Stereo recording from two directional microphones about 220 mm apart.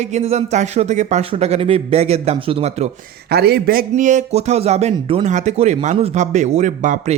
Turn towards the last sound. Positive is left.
turn(degrees=-35)  # may be behind; listen again after turning